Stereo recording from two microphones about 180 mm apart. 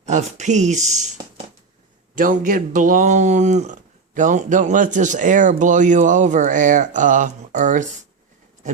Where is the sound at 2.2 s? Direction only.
50° right (ahead or behind).